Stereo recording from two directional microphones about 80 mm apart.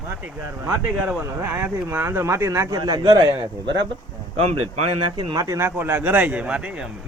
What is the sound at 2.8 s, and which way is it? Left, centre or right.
Speech, right.